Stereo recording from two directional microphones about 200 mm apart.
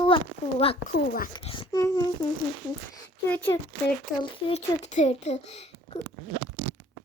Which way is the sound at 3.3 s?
10° left (ahead or behind).